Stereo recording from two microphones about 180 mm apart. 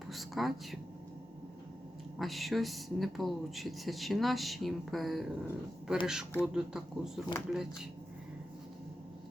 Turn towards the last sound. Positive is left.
turn(degrees=-5)  # may be behind; listen again after turning